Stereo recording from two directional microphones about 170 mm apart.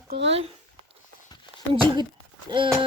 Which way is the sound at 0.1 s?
90° right.